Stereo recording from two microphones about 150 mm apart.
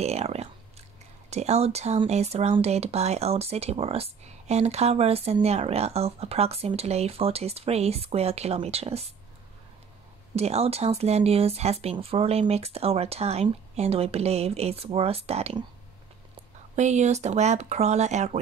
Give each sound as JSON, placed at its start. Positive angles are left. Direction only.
{"t": 0.0, "sound": "speech", "side_deg": -45}
{"t": 10.3, "sound": "speech", "side_deg": -45}
{"t": 16.7, "sound": "speech", "side_deg": -50}